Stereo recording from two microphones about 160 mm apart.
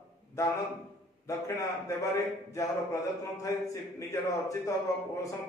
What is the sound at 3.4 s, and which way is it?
Speech, 20° left (ahead or behind).